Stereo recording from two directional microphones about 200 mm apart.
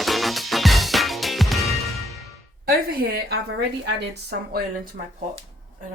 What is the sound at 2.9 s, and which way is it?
A woman's voice, 50° right (ahead or behind).